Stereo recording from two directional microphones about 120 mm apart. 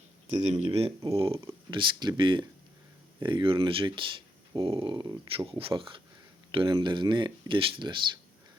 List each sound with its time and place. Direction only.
0.4 s speech: 65° right (ahead or behind); by 5.5 s 35° right (ahead or behind)
5.5 s speech: 50° right (ahead or behind)